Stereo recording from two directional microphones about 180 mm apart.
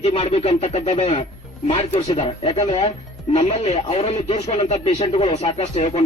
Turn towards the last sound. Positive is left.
turn(degrees=35)  # may be behind; listen again after turning